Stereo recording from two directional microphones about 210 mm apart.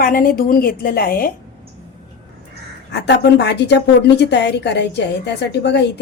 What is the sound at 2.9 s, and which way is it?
Speech, 55° left (ahead or behind).